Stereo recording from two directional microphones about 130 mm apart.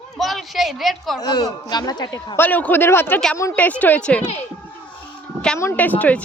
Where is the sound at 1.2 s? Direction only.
30° left (ahead or behind); by 4.2 s 10° left (ahead or behind).